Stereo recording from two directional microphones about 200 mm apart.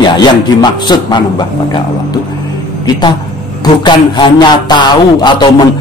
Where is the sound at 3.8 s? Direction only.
20° left (ahead or behind).